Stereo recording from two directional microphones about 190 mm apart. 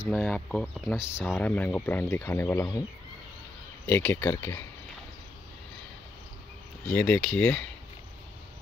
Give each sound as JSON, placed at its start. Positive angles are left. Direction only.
{"t": 0.0, "sound": "speech", "side_deg": 5}
{"t": 3.9, "sound": "speech", "side_deg": 10}
{"t": 6.9, "sound": "speech", "side_deg": 5}